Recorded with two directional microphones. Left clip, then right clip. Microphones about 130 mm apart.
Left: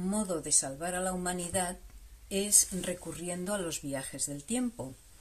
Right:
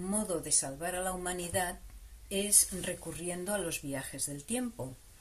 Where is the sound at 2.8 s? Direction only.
25° left (ahead or behind).